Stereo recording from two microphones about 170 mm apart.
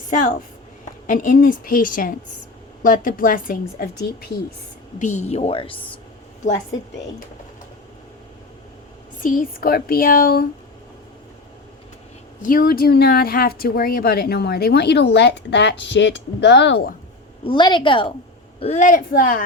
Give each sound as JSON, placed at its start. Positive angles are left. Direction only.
{"t": 1.0, "sound": "a woman's voice", "side_deg": 50}
{"t": 4.9, "sound": "a woman's voice", "side_deg": 45}
{"t": 9.2, "sound": "a woman's voice", "side_deg": 55}
{"t": 12.4, "sound": "speech", "side_deg": 55}
{"t": 17.4, "sound": "a woman's voice", "side_deg": 30}
{"t": 18.6, "sound": "a woman's voice", "side_deg": 45}